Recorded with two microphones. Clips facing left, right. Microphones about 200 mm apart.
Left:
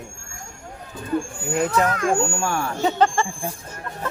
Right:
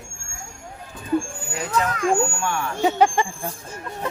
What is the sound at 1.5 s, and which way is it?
Speech, 50° left (ahead or behind).